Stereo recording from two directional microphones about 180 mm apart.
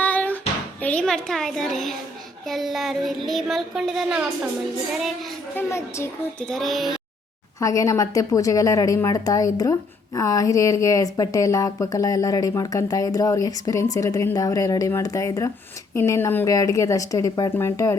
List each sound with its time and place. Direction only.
0.0 s a sound: 10° left (ahead or behind)
0.8 s child singing: 5° left (ahead or behind)
5.5 s a woman's voice: 15° left (ahead or behind)
6.5 s child singing: centre (ahead or behind)
7.6 s a woman's voice: 20° left (ahead or behind)